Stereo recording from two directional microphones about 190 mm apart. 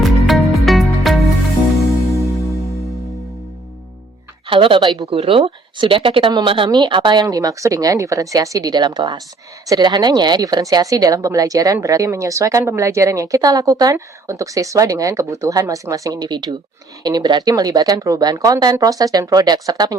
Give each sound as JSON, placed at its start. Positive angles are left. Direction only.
{"t": 0.0, "sound": "music", "side_deg": 0}
{"t": 2.1, "sound": "music", "side_deg": 15}
{"t": 4.4, "sound": "speech", "side_deg": -25}